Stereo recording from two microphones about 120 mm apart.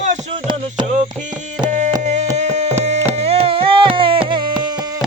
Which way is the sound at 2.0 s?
80° right.